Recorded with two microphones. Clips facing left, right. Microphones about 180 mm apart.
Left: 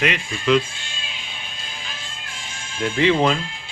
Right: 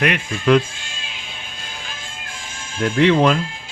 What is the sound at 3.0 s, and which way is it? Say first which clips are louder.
Speech: right 3 dB; 65° right (ahead or behind).